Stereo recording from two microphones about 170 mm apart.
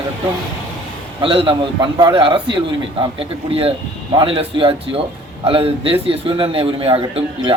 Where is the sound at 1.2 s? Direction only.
30° right (ahead or behind).